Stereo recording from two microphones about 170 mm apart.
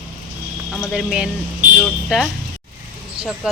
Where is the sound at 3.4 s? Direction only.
5° right (ahead or behind).